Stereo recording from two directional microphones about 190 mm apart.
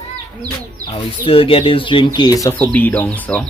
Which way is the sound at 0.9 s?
30° left (ahead or behind).